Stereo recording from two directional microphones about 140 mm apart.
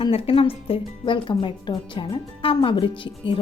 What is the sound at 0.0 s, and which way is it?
Speech, 40° left (ahead or behind).